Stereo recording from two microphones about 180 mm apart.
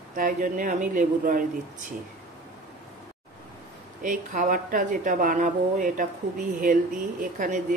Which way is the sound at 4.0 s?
45° right (ahead or behind).